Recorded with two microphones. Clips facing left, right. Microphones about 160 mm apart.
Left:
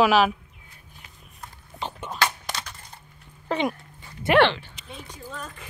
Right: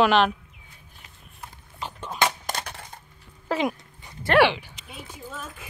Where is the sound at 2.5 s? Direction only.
50° right (ahead or behind).